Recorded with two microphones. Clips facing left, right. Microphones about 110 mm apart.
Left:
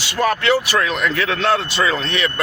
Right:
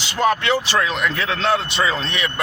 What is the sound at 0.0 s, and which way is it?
Speech, 20° right (ahead or behind).